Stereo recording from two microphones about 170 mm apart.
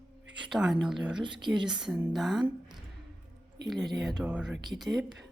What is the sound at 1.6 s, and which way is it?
Speech, 5° right (ahead or behind).